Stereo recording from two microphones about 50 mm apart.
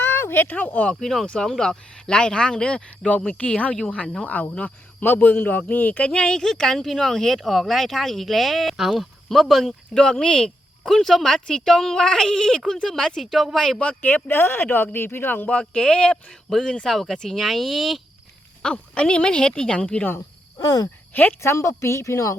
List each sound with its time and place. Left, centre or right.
0.0 s a sound: left
0.4 s speech: left
1.0 s speech: centre; by 6.1 s left
6.1 s speech: centre
9.9 s speech: centre
14.0 s speech: left
15.4 s speech: centre
16.3 s speech: centre
18.6 s speech: centre
21.1 s speech: left
21.4 s a woman's voice: left